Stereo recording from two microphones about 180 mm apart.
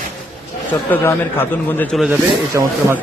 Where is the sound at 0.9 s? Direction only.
10° left (ahead or behind).